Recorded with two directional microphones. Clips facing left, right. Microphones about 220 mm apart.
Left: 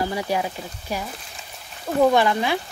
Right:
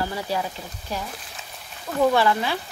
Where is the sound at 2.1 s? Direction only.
15° left (ahead or behind).